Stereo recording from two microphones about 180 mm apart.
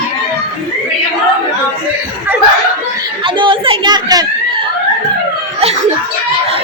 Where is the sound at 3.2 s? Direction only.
30° right (ahead or behind).